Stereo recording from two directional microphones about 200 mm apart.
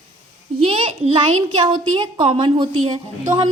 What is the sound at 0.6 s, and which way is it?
A woman's voice, 30° right (ahead or behind).